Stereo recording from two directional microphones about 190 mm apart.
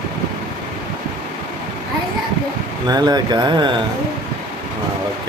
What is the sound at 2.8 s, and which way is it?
Speech, 20° right (ahead or behind).